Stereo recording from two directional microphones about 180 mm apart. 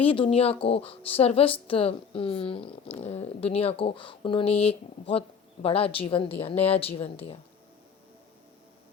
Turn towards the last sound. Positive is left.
turn(degrees=35)  # may be behind; listen again after turning